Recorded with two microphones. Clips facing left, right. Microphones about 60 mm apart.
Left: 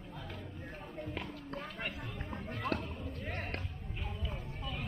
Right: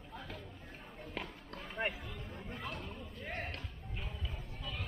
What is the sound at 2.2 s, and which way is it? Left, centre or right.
Run, left.